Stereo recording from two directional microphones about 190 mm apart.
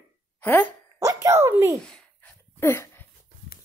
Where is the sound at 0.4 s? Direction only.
10° left (ahead or behind).